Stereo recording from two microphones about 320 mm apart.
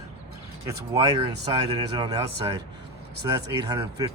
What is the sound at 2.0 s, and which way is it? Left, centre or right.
Speech, centre.